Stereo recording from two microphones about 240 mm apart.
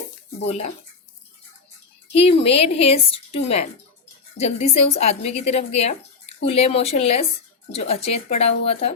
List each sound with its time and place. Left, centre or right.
0.4 s speech: left
2.4 s speech: left